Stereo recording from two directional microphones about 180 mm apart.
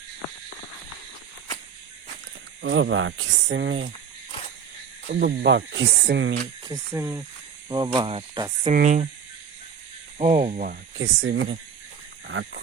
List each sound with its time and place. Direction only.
2.6 s speech: 85° right
5.0 s speech: 75° right (ahead or behind)
6.1 s speech: 90° right
6.7 s speech: 15° right (ahead or behind)
8.7 s speech: 40° right (ahead or behind)
10.2 s speech: 45° right (ahead or behind)
10.9 s speech: 90° right